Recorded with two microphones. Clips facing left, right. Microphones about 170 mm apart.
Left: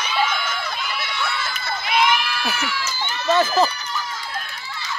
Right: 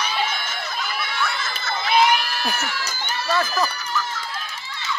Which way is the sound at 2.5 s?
45° right (ahead or behind).